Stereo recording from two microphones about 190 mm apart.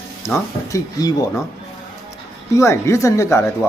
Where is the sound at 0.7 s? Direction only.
20° left (ahead or behind).